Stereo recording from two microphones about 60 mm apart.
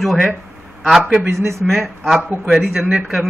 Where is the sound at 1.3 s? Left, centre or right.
Right.